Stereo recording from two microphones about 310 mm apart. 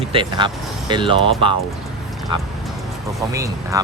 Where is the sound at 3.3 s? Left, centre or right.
Centre.